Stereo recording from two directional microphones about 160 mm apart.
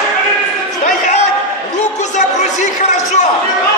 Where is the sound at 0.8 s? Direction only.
50° left (ahead or behind).